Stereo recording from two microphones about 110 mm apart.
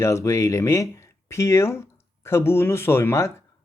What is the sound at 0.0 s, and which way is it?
Speech, 25° left (ahead or behind).